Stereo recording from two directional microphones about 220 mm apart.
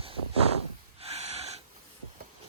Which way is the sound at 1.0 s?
30° right (ahead or behind).